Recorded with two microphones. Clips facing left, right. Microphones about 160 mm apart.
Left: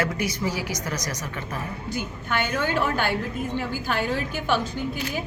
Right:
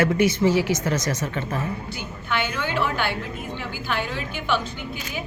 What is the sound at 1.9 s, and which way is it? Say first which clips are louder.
A woman's voice: left 1 dB; 45° left (ahead or behind).